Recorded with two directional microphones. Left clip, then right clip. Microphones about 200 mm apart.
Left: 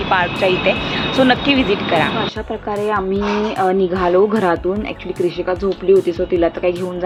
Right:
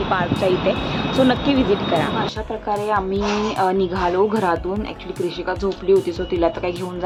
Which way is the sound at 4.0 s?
15° left (ahead or behind).